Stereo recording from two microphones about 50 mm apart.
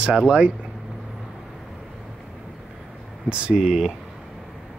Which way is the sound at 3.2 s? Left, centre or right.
Right.